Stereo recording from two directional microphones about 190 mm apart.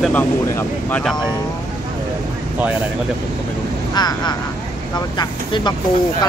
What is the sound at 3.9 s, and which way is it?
Speech, 20° left (ahead or behind).